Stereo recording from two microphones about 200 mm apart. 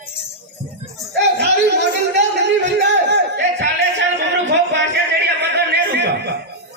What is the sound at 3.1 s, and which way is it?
Music, 60° right (ahead or behind).